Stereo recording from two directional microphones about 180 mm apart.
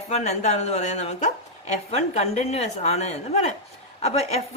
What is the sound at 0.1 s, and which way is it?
A woman's voice, 40° left (ahead or behind).